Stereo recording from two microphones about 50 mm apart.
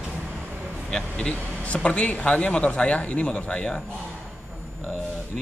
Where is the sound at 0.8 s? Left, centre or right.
Centre.